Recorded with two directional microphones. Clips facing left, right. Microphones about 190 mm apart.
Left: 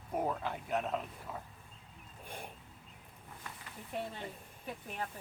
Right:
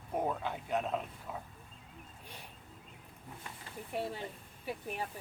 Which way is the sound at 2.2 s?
50° left (ahead or behind).